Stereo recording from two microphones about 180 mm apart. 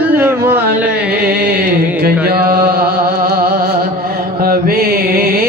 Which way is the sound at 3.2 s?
55° right (ahead or behind).